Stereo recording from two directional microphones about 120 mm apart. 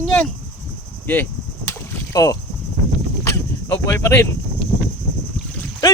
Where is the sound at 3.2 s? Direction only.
20° left (ahead or behind).